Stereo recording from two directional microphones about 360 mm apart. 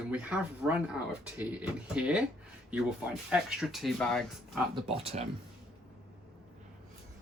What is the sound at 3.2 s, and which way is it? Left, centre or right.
Speech, centre.